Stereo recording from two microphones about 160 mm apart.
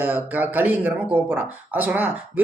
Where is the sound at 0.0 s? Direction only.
10° right (ahead or behind).